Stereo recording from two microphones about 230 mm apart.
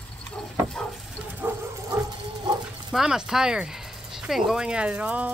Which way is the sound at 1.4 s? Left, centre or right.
Centre.